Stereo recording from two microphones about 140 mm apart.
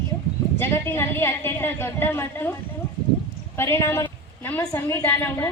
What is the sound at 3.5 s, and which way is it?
A woman's voice, 20° left (ahead or behind).